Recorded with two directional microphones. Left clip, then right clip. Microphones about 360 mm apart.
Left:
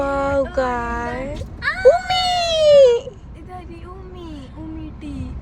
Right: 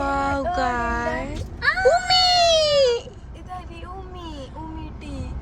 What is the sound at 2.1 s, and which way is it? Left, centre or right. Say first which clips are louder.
Baby cry: right 2 dB; centre.